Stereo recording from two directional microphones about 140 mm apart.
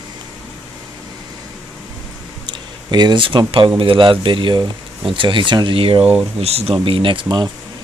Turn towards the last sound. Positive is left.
turn(degrees=-35)  # may be behind; listen again after turning